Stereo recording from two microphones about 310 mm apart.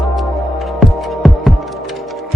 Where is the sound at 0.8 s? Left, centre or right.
Centre.